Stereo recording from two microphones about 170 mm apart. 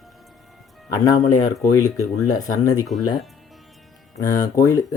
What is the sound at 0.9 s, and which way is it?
Speech, 20° left (ahead or behind).